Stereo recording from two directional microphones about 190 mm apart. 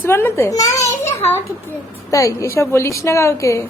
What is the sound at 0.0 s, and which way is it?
Babbling, 10° left (ahead or behind).